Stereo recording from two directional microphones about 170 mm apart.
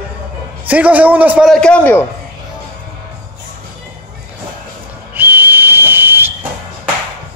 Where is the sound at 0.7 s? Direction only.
10° right (ahead or behind).